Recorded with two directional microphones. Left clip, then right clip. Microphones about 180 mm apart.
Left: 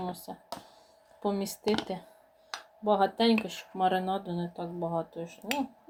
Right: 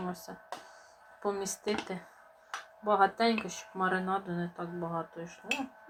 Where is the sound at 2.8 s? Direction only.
20° left (ahead or behind).